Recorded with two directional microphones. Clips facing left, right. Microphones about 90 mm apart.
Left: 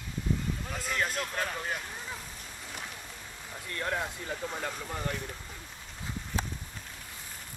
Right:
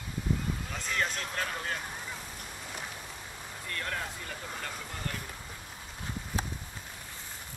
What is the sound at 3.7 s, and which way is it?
Speech, 20° left (ahead or behind).